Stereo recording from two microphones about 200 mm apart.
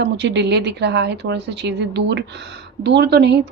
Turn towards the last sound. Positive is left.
turn(degrees=-60)  # may be behind; listen again after turning